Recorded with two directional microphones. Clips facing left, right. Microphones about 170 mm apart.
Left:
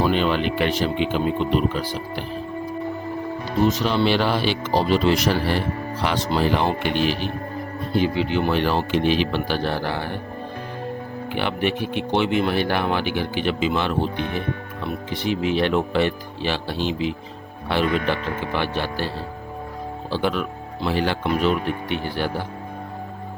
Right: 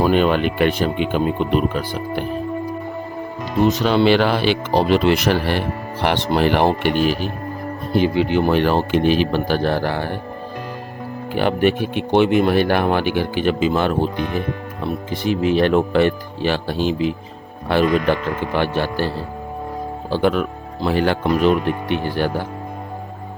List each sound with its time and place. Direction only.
0.0 s speech: 50° right (ahead or behind)
3.8 s speech: 90° right; by 6.9 s 65° right (ahead or behind)
6.9 s speech: 45° right (ahead or behind)
11.3 s speech: 45° right (ahead or behind)